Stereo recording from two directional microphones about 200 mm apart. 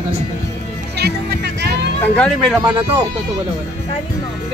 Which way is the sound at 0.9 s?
55° right (ahead or behind).